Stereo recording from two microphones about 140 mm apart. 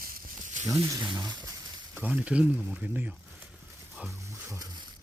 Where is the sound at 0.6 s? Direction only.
20° right (ahead or behind).